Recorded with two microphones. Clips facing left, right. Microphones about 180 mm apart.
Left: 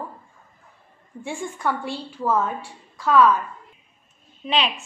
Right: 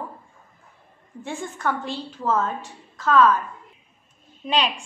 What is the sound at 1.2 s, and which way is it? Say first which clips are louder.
A woman's voice: left 1 dB; 10° left (ahead or behind).